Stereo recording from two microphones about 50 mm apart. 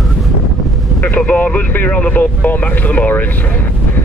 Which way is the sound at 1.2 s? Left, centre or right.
Left.